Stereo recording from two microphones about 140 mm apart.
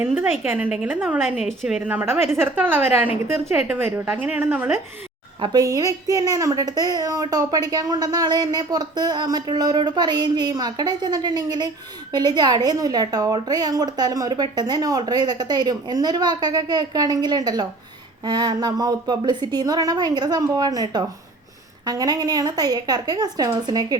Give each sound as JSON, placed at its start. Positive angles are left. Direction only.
{"t": 0.0, "sound": "a woman's voice", "side_deg": -15}
{"t": 5.4, "sound": "a woman's voice", "side_deg": -25}